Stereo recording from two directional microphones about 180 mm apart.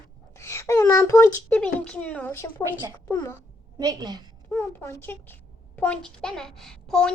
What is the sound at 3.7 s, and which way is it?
Speech, 20° right (ahead or behind).